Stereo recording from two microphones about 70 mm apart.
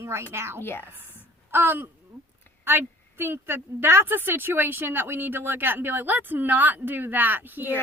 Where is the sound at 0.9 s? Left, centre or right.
Right.